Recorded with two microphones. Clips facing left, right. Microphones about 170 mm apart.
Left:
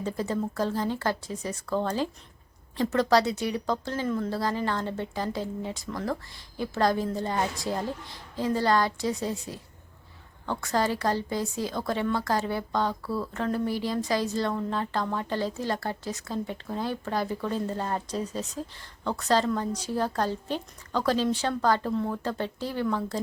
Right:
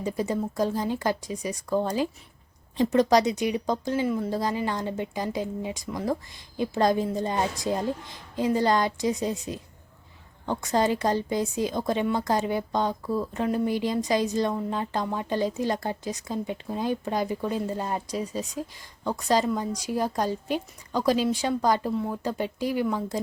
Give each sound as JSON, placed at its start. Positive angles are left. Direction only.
{"t": 0.0, "sound": "a woman's voice", "side_deg": -15}